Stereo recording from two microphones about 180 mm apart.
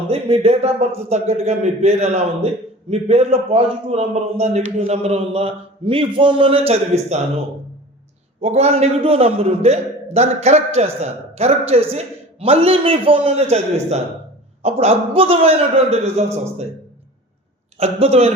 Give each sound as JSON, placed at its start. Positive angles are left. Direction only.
{"t": 0.1, "sound": "a man's voice", "side_deg": -35}
{"t": 8.4, "sound": "a man's voice", "side_deg": -35}
{"t": 17.7, "sound": "a man's voice", "side_deg": -35}